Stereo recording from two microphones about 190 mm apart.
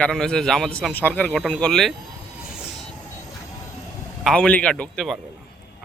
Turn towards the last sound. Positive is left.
turn(degrees=5)  # may be behind; listen again after turning